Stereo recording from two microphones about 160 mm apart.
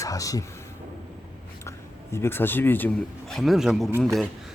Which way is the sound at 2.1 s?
15° left (ahead or behind).